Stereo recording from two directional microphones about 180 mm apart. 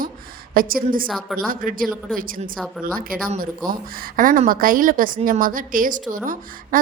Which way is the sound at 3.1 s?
50° right (ahead or behind).